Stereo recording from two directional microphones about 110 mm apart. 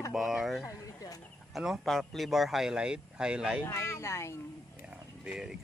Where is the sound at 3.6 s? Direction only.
25° left (ahead or behind).